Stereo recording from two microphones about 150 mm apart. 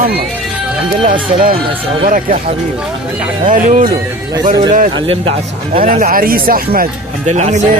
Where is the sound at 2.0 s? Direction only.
65° right (ahead or behind).